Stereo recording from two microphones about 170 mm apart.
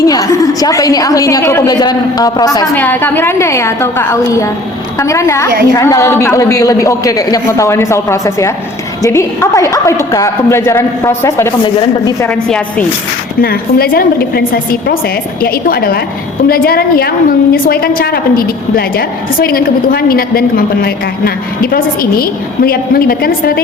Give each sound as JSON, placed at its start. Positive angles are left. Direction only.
{"t": 0.0, "sound": "a woman's voice", "side_deg": 20}
{"t": 2.8, "sound": "a woman's voice", "side_deg": 10}
{"t": 11.6, "sound": "a woman's voice", "side_deg": 30}
{"t": 12.2, "sound": "a woman's voice", "side_deg": 5}
{"t": 13.4, "sound": "a woman's voice", "side_deg": 60}